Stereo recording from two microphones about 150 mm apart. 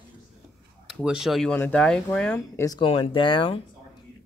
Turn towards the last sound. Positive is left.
turn(degrees=35)  # may be behind; listen again after turning